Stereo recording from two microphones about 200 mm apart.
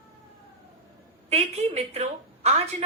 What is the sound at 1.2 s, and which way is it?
A woman's voice, 30° right (ahead or behind).